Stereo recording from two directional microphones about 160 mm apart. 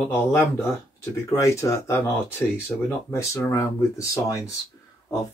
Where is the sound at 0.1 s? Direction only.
15° left (ahead or behind).